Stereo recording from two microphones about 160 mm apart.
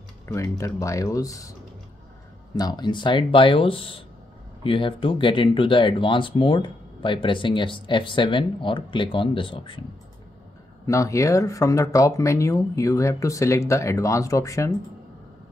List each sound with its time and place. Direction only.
0.3 s speech: 20° left (ahead or behind)
2.5 s speech: 25° left (ahead or behind)
10.9 s speech: 20° left (ahead or behind)